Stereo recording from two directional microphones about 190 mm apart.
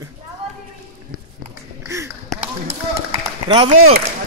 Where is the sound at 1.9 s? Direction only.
15° right (ahead or behind).